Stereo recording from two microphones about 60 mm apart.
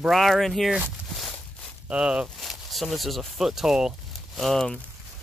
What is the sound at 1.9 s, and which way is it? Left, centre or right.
Speech, centre.